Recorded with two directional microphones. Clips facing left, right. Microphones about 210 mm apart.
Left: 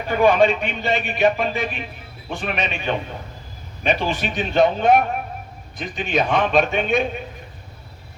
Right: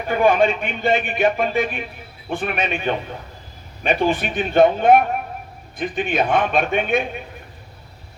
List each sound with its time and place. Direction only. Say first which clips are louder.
0.1 s speech: left 1 dB; 50° right (ahead or behind)